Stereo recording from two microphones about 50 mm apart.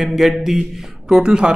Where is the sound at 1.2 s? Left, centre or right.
Centre.